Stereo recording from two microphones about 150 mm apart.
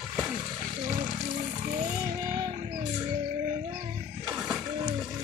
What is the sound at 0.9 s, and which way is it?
Music, 50° right (ahead or behind).